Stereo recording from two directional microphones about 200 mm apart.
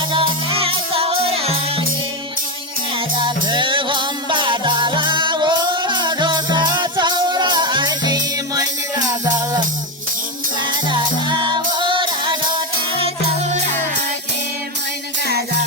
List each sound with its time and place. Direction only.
0.1 s music: 25° right (ahead or behind)
3.2 s music: 20° right (ahead or behind)
10.8 s music: 20° right (ahead or behind)